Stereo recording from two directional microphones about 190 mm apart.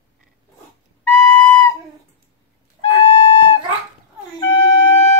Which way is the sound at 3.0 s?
30° left (ahead or behind).